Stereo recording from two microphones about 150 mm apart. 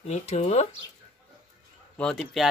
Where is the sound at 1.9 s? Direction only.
5° left (ahead or behind).